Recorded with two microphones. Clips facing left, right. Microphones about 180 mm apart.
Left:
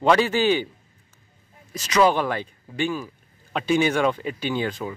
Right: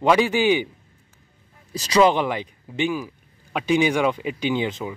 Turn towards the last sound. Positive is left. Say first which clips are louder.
# right 2 dB
turn(degrees=-20)  # may be behind; listen again after turning